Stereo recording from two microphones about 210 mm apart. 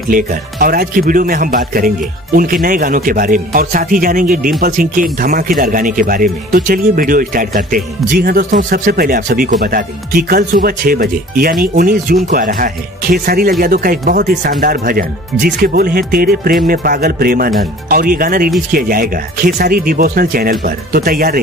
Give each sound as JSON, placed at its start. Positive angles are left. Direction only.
{"t": 0.1, "sound": "a man's voice", "side_deg": -45}